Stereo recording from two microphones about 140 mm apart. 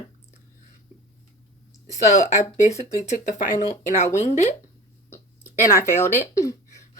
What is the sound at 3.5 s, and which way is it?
Speech, 50° left (ahead or behind).